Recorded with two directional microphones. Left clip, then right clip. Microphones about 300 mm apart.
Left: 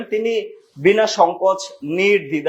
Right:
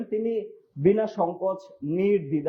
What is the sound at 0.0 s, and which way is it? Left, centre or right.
Speech, centre.